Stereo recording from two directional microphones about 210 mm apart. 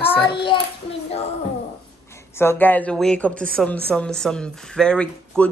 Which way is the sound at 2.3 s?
10° left (ahead or behind).